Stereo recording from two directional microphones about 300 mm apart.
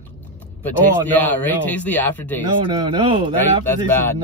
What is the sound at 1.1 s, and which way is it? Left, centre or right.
Speech, centre.